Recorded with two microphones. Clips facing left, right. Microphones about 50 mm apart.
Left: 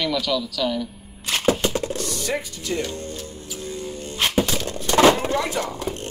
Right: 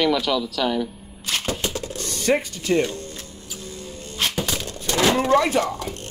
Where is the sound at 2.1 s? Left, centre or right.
Right.